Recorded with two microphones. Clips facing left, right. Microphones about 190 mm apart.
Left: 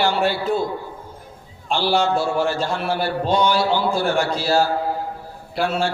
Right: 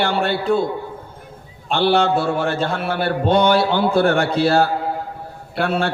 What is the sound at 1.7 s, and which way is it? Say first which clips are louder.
A man's voice: right 3 dB; 60° right (ahead or behind).